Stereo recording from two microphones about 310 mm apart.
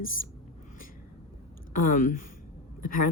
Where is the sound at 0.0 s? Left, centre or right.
Left.